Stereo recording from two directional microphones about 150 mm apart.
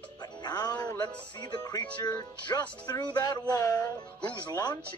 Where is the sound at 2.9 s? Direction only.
25° left (ahead or behind).